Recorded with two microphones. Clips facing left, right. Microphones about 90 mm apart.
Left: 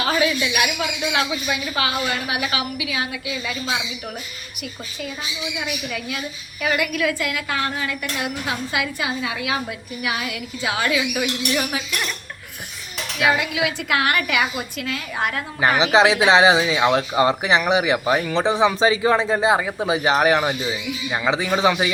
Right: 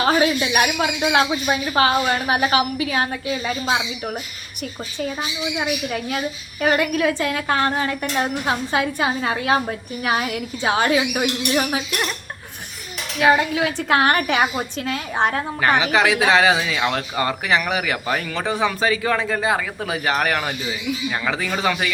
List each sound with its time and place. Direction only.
0.0 s a woman's voice: 35° right (ahead or behind)
13.1 s a woman's voice: 35° right (ahead or behind)
15.8 s speech: 25° left (ahead or behind)